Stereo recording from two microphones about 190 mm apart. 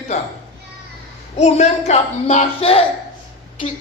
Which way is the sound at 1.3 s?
35° left (ahead or behind).